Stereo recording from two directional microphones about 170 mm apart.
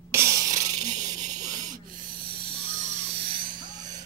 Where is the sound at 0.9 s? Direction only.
45° right (ahead or behind).